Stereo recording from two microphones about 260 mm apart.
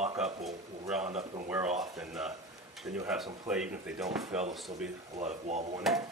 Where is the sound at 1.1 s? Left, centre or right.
Right.